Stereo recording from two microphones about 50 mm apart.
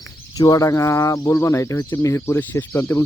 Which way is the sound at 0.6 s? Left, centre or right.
Left.